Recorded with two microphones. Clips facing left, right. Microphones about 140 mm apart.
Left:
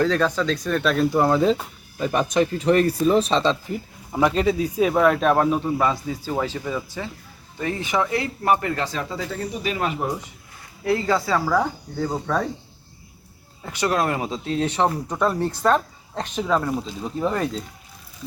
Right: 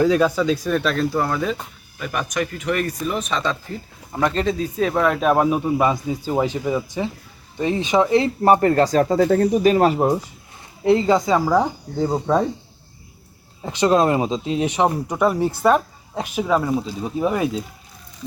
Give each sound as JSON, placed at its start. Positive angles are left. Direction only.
{"t": 0.0, "sound": "speech", "side_deg": -10}
{"t": 1.1, "sound": "speech", "side_deg": 25}
{"t": 4.1, "sound": "speech", "side_deg": 5}
{"t": 8.5, "sound": "speech", "side_deg": -40}
{"t": 10.8, "sound": "speech", "side_deg": -20}
{"t": 13.7, "sound": "speech", "side_deg": -25}